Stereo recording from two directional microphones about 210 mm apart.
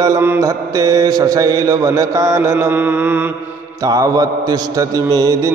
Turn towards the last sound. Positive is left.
turn(degrees=-15)  # may be behind; listen again after turning